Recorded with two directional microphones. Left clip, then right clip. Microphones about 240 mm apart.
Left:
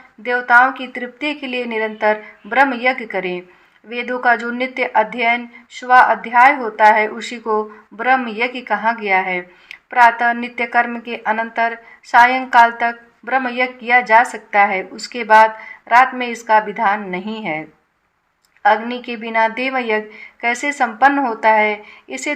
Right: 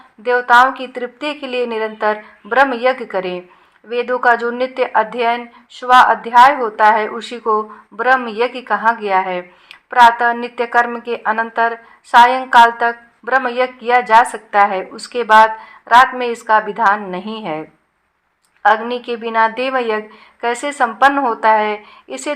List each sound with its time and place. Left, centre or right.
0.3 s a woman's voice: centre